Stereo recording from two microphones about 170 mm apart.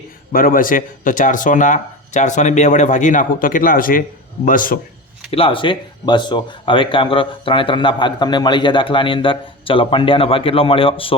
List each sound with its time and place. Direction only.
0.3 s speech: 55° left (ahead or behind)
5.3 s speech: 30° left (ahead or behind)